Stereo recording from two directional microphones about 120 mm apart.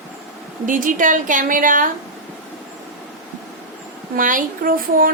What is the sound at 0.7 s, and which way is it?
A woman's voice, 90° right.